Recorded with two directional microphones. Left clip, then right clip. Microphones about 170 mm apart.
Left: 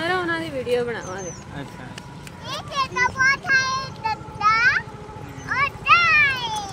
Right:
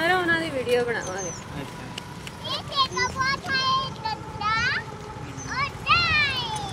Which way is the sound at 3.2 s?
20° left (ahead or behind).